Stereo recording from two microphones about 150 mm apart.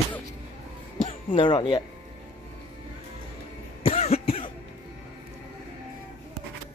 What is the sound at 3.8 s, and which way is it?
Cough, 40° left (ahead or behind).